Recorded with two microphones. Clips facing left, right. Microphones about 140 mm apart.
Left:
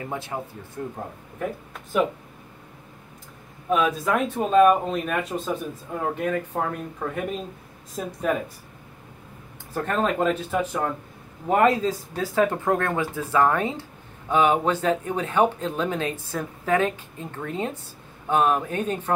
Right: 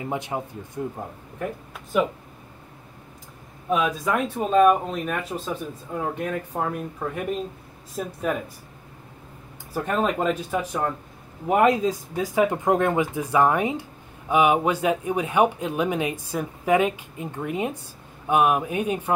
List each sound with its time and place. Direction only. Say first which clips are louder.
0.0 s speech: right 2 dB; 20° right (ahead or behind)
1.4 s speech: left 1 dB; centre (ahead or behind)
3.7 s speech: left 1 dB; centre (ahead or behind)
9.8 s speech: even; 5° right (ahead or behind)